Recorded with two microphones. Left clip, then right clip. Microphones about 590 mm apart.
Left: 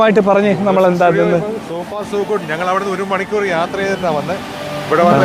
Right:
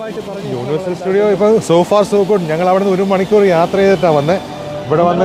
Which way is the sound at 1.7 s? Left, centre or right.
Right.